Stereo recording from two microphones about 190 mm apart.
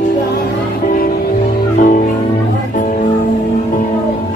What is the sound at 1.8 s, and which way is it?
Music, 45° left (ahead or behind).